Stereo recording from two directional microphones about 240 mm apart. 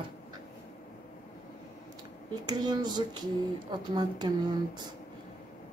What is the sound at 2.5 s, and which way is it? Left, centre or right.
Speech, centre.